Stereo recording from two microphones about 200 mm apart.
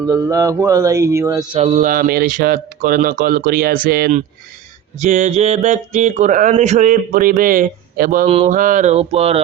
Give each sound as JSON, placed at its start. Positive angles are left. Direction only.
{"t": 0.0, "sound": "speech", "side_deg": -15}
{"t": 1.5, "sound": "speech", "side_deg": -35}
{"t": 4.9, "sound": "speech", "side_deg": -35}
{"t": 8.3, "sound": "a sound", "side_deg": -30}
{"t": 8.5, "sound": "speech", "side_deg": -40}